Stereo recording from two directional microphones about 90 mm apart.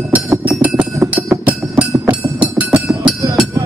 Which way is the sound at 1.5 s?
15° right (ahead or behind).